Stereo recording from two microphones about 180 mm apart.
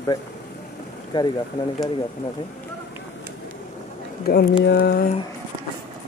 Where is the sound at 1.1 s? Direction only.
25° left (ahead or behind).